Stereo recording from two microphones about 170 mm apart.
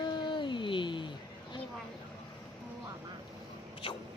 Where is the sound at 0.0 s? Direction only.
25° left (ahead or behind).